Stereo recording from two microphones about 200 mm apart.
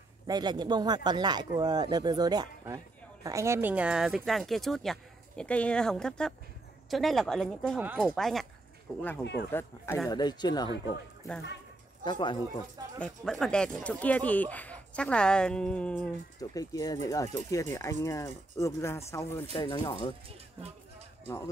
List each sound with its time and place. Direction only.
0.3 s speech: 20° right (ahead or behind); by 9.0 s 5° left (ahead or behind)
9.2 s speech: 60° left (ahead or behind)
9.5 s speech: 10° left (ahead or behind)
12.0 s speech: 25° left (ahead or behind)
13.0 s speech: 5° left (ahead or behind)
16.3 s speech: 20° left (ahead or behind)
19.5 s speech: 25° left (ahead or behind)